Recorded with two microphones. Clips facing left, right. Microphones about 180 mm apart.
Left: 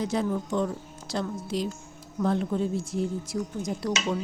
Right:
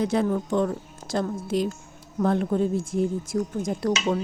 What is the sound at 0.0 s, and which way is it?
A woman's voice, 60° right (ahead or behind).